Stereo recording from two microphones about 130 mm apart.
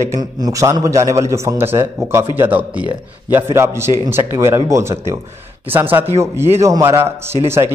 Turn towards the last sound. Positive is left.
turn(degrees=-20)  # may be behind; listen again after turning